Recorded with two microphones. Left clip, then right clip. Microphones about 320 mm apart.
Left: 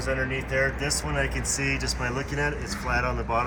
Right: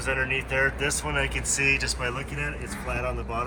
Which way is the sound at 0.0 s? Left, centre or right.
Centre.